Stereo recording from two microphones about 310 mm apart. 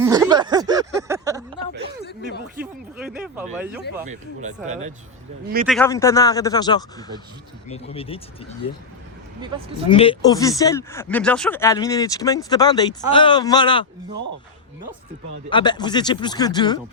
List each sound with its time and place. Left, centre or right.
0.0 s a sound: centre
3.0 s speech: centre
4.4 s speech: right
5.6 s speech: centre
9.4 s speech: centre
9.9 s speech: centre
15.4 s speech: centre